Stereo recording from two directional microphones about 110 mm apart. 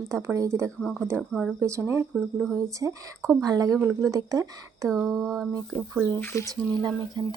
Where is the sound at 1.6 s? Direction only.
25° right (ahead or behind).